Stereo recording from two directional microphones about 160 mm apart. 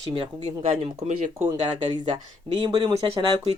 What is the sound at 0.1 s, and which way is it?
Speech, 35° right (ahead or behind).